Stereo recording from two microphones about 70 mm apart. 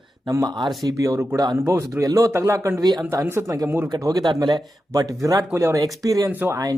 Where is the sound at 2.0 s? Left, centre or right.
Right.